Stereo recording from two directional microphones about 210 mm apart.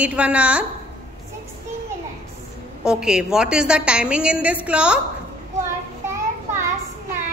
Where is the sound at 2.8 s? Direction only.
5° right (ahead or behind).